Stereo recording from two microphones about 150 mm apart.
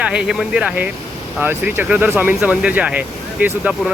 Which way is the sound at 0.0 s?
5° right (ahead or behind).